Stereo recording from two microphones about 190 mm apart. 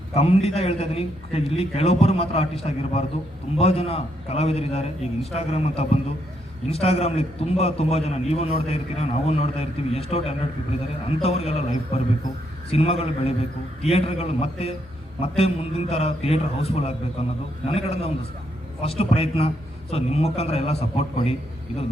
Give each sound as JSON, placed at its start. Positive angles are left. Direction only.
{"t": 0.1, "sound": "a man's voice", "side_deg": 35}